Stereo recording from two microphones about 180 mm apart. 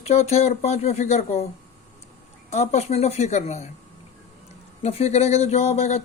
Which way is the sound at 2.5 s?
40° left (ahead or behind).